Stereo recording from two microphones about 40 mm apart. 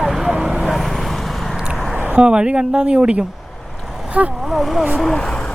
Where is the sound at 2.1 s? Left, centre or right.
Right.